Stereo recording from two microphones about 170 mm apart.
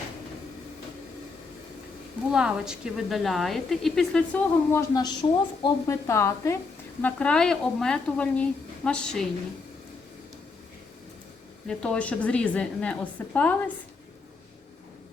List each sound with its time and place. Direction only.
2.3 s a woman's voice: 5° right (ahead or behind)
11.7 s a woman's voice: 5° left (ahead or behind)